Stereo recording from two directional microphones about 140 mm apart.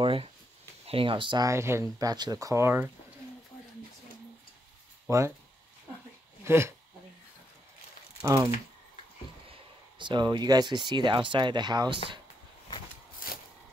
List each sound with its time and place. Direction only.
0.0 s speech: 40° right (ahead or behind)
1.5 s speech: 20° right (ahead or behind)
5.1 s speech: 20° right (ahead or behind)
6.4 s speech: 20° right (ahead or behind)
9.5 s speech: 35° right (ahead or behind)